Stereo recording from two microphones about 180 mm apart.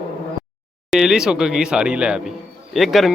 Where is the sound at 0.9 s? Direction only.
Centre (ahead or behind).